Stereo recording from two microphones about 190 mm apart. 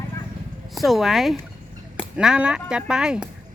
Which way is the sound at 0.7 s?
Centre (ahead or behind).